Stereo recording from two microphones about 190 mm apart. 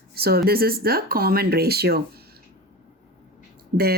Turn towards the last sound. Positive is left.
turn(degrees=-50)  # may be behind; listen again after turning